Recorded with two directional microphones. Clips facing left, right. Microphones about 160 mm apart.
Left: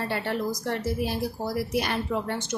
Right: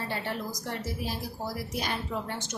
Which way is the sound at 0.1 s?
65° left (ahead or behind).